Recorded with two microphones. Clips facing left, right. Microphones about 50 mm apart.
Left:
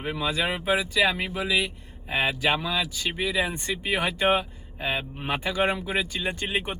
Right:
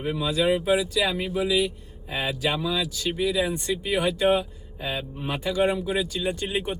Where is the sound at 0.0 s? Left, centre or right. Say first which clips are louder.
Right 3 dB; left.